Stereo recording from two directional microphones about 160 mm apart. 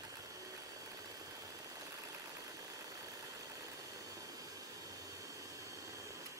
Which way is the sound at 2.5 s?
20° right (ahead or behind).